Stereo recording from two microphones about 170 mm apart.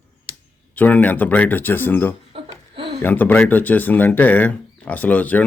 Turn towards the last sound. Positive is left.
turn(degrees=10)  # may be behind; listen again after turning